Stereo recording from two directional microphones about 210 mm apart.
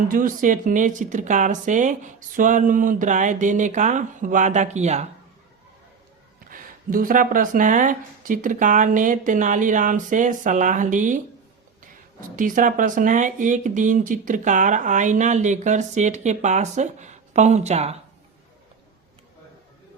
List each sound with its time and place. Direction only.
0.1 s speech: 40° right (ahead or behind)
6.5 s speech: 40° right (ahead or behind)
12.4 s speech: 40° right (ahead or behind)